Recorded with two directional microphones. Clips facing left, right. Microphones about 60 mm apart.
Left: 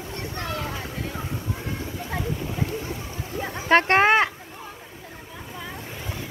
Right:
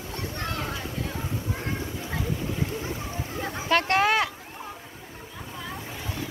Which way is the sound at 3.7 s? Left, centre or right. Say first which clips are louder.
Left 5 dB; left.